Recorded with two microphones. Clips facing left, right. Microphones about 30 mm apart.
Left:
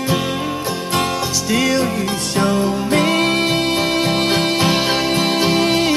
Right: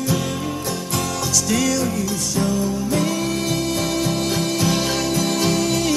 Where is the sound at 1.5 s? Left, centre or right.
Left.